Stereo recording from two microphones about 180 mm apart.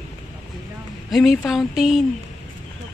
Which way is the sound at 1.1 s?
Centre (ahead or behind).